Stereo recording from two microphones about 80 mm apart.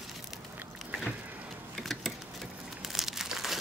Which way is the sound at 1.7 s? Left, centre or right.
Centre.